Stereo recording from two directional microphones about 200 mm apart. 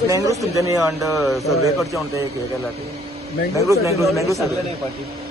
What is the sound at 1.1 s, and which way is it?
Speech, centre (ahead or behind).